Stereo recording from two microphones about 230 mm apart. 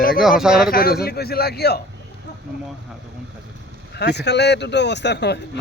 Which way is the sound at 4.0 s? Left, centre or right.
Left.